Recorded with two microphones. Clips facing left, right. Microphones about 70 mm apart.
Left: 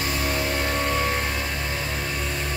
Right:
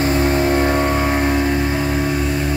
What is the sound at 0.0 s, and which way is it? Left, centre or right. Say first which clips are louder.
Vehicle: right 10 dB; right.